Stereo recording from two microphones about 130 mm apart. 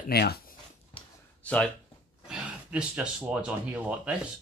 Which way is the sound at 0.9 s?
45° left (ahead or behind).